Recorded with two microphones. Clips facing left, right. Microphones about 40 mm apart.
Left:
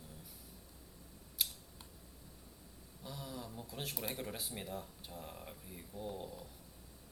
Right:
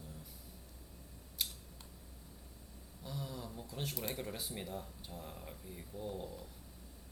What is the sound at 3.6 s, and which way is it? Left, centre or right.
Speech, centre.